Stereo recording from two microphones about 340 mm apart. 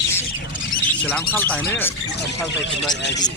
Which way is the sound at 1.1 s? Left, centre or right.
Centre.